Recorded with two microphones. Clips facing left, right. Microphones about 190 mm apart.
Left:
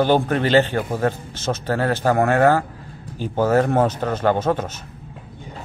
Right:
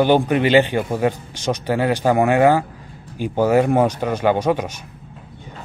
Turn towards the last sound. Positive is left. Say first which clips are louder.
# right 1 dB
turn(degrees=-15)  # may be behind; listen again after turning